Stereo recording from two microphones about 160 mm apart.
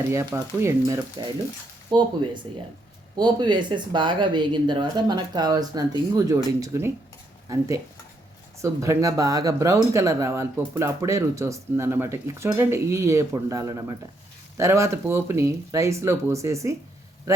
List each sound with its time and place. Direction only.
0.3 s speech: 20° right (ahead or behind)
8.6 s speech: 20° right (ahead or behind)